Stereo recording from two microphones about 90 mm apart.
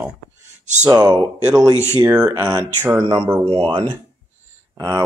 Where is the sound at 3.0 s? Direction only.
80° right.